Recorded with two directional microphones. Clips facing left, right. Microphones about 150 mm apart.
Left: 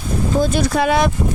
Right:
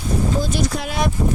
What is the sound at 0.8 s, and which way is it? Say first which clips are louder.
Speech: left 7 dB; 85° left.